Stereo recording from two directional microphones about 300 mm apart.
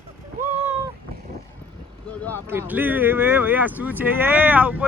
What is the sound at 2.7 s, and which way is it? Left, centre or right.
Speech, centre.